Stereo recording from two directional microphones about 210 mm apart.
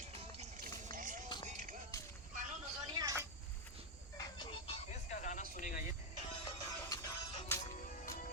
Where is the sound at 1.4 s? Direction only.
35° right (ahead or behind).